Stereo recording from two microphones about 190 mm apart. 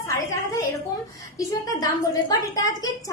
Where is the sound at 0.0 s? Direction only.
15° left (ahead or behind).